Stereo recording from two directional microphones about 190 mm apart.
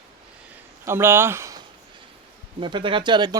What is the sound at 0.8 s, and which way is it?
Speech, 15° right (ahead or behind).